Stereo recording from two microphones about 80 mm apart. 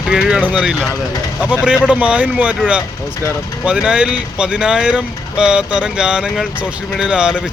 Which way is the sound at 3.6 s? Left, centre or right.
Centre.